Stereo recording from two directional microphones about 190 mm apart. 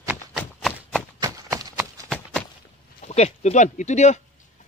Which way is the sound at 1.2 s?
20° right (ahead or behind).